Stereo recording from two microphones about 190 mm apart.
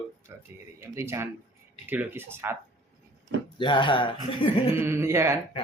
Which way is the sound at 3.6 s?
25° left (ahead or behind).